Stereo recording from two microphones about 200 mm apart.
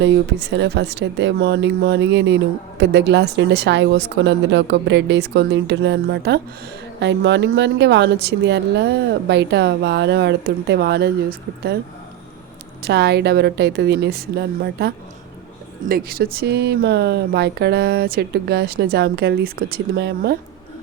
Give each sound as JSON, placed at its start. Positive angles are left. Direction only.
{"t": 0.0, "sound": "speech", "side_deg": -60}
{"t": 12.8, "sound": "speech", "side_deg": -55}